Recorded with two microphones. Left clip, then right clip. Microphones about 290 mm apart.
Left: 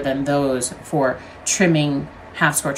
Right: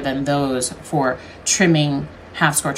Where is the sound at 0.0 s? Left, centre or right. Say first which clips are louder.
Left 1 dB; centre.